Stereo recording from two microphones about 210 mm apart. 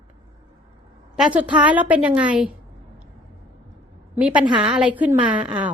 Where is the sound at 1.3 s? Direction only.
5° right (ahead or behind).